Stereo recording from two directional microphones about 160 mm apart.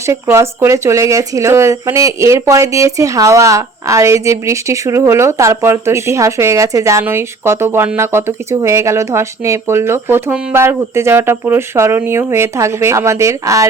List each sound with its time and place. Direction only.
0.1 s speech: 15° right (ahead or behind)